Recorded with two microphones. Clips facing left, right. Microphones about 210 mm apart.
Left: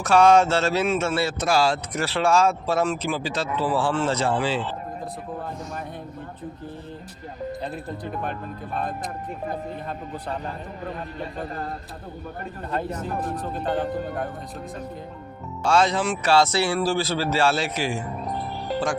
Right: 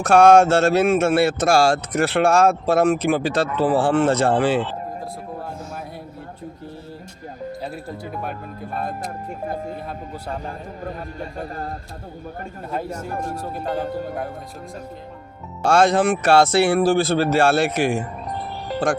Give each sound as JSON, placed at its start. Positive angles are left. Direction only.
{"t": 0.0, "sound": "speech", "side_deg": -55}
{"t": 7.9, "sound": "speech", "side_deg": -5}
{"t": 13.6, "sound": "speech", "side_deg": 0}
{"t": 15.6, "sound": "speech", "side_deg": -50}